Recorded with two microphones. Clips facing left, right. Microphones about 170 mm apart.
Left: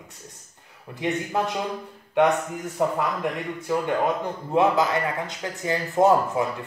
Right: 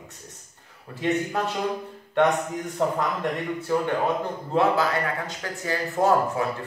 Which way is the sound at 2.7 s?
10° left (ahead or behind).